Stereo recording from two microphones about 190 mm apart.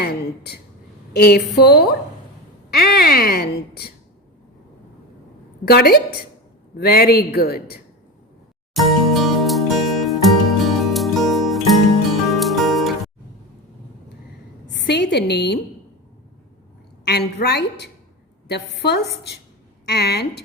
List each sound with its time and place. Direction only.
0.0 s a sound: 60° left (ahead or behind)
1.1 s speech: 60° left (ahead or behind)
5.6 s a woman's voice: 55° left (ahead or behind)
8.7 s music: centre (ahead or behind)
14.8 s speech: 65° left (ahead or behind)
17.1 s speech: 60° left (ahead or behind)